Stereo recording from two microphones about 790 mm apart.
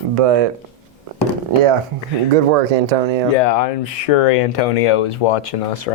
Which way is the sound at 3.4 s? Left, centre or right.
Left.